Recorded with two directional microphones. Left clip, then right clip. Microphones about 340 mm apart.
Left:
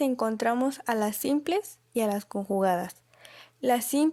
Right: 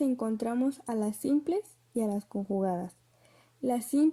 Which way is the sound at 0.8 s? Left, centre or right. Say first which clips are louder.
Left 5 dB; left.